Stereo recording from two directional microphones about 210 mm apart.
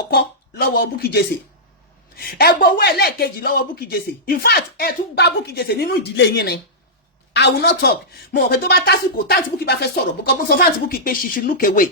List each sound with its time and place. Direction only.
0.1 s a woman's voice: 50° left (ahead or behind)